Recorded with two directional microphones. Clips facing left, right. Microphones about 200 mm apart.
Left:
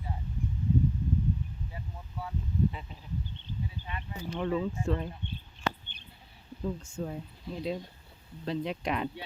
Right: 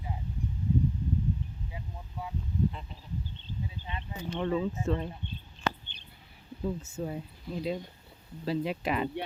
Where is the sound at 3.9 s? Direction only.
25° right (ahead or behind).